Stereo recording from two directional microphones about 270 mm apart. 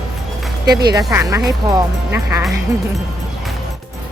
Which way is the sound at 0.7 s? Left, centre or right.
Centre.